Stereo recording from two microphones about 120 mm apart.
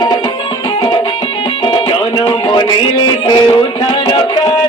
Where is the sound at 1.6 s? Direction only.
40° left (ahead or behind).